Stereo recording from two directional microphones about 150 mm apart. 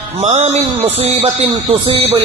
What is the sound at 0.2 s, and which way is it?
A man's voice, 45° right (ahead or behind).